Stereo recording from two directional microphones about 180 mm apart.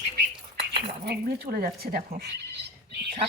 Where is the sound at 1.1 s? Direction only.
60° right (ahead or behind).